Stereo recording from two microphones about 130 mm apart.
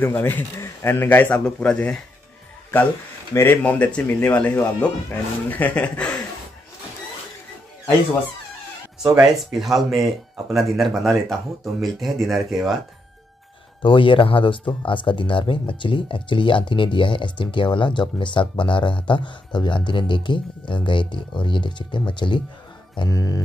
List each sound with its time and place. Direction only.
0.0 s a man's voice: 15° left (ahead or behind)
3.3 s a man's voice: 15° left (ahead or behind)
9.0 s speech: 5° right (ahead or behind)
13.8 s speech: 40° left (ahead or behind)
22.9 s music: 25° left (ahead or behind)